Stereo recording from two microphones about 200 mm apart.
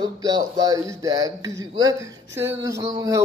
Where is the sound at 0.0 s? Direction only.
20° right (ahead or behind).